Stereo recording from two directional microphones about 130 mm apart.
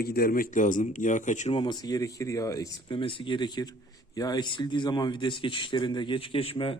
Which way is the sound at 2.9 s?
40° left (ahead or behind).